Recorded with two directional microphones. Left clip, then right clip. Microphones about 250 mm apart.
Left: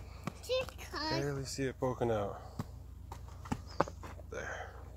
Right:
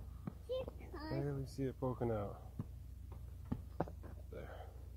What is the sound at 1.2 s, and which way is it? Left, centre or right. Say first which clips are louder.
Speech: left 6 dB; centre.